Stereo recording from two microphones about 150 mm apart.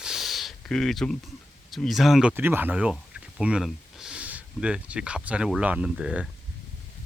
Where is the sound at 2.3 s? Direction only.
15° right (ahead or behind).